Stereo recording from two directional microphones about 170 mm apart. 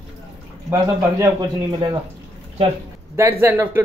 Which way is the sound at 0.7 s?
20° right (ahead or behind).